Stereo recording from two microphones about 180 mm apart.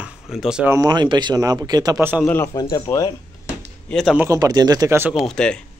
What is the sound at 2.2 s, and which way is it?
Speech, 15° left (ahead or behind).